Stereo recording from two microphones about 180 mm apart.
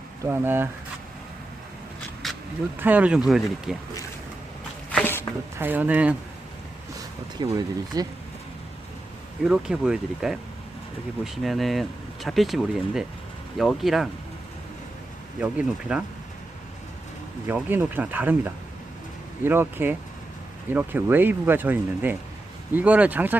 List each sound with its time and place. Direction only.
0.3 s speech: 10° right (ahead or behind)
2.2 s a sound: centre (ahead or behind)
2.7 s speech: 10° right (ahead or behind)
4.9 s a sound: 10° left (ahead or behind)
5.5 s speech: 10° right (ahead or behind)
7.3 s speech: 20° right (ahead or behind)
9.4 s speech: 5° right (ahead or behind)
15.4 s speech: 5° right (ahead or behind)
17.5 s speech: 10° right (ahead or behind)